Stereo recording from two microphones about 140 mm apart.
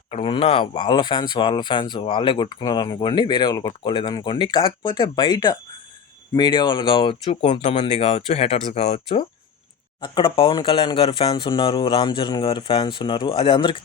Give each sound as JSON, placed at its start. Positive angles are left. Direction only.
{"t": 0.1, "sound": "speech", "side_deg": 40}
{"t": 10.0, "sound": "speech", "side_deg": 35}